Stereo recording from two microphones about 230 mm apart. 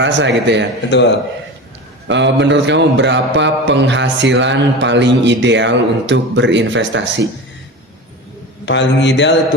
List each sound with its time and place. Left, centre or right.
0.0 s a man's voice: right
0.9 s a man's voice: left
2.0 s a man's voice: right
8.6 s a man's voice: left